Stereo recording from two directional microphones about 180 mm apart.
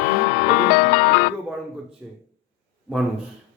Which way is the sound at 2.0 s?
5° right (ahead or behind).